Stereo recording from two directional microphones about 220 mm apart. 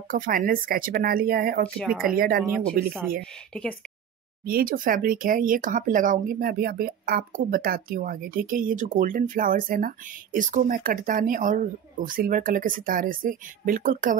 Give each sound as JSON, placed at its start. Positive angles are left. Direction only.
{"t": 0.1, "sound": "speech", "side_deg": -40}
{"t": 1.8, "sound": "speech", "side_deg": 0}
{"t": 2.1, "sound": "speech", "side_deg": -40}
{"t": 4.5, "sound": "speech", "side_deg": -40}